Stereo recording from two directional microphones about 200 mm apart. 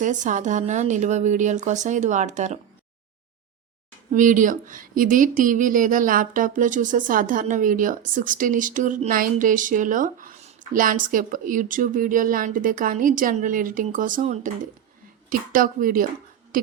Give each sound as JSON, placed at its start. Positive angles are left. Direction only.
{"t": 0.0, "sound": "speech", "side_deg": -40}
{"t": 4.1, "sound": "a woman's voice", "side_deg": -40}